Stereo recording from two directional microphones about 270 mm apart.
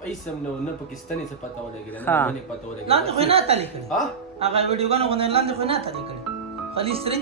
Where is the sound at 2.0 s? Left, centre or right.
Centre.